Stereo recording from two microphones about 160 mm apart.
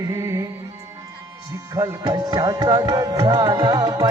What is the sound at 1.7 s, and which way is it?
Music, 25° right (ahead or behind).